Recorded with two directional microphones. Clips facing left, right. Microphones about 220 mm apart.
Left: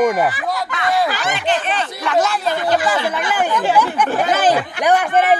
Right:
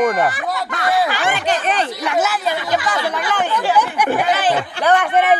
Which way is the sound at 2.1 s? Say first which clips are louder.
Left 3 dB; 5° right (ahead or behind).